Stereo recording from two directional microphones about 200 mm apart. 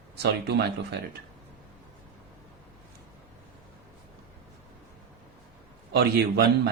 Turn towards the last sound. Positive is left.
turn(degrees=-55)  # may be behind; listen again after turning